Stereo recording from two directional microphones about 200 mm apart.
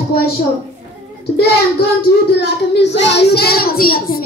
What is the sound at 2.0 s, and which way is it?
Speech, 50° left (ahead or behind).